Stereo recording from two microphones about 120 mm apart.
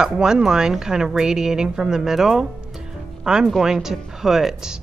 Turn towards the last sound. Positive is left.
turn(degrees=-5)  # may be behind; listen again after turning